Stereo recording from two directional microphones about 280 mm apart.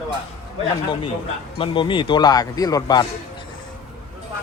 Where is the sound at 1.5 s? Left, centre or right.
Centre.